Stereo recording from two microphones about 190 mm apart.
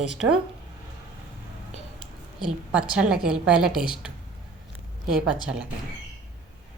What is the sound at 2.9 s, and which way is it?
A woman's voice, 5° right (ahead or behind).